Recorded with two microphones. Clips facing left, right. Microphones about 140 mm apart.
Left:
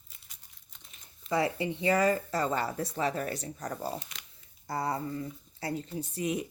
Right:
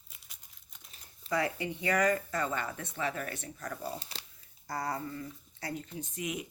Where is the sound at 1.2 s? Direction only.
25° left (ahead or behind).